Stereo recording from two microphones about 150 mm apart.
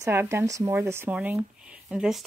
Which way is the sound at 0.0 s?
20° right (ahead or behind).